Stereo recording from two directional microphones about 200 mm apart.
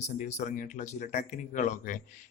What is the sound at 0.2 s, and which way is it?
Speech, 35° left (ahead or behind).